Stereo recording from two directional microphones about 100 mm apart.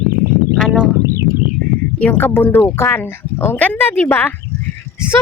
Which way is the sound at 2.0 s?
15° left (ahead or behind).